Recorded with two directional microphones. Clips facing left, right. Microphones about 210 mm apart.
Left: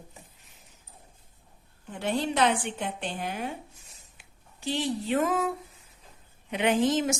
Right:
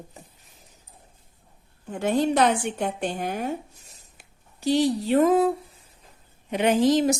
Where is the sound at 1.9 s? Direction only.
45° right (ahead or behind).